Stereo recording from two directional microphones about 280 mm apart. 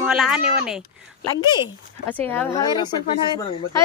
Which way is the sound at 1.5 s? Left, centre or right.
Centre.